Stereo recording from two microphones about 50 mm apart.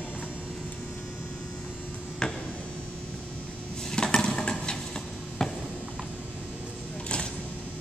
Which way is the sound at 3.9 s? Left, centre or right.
Centre.